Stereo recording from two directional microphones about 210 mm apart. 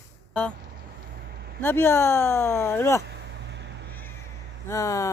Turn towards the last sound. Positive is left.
turn(degrees=15)  # may be behind; listen again after turning